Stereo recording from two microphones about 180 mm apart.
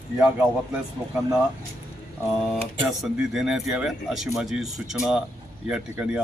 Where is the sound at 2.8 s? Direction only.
Centre (ahead or behind).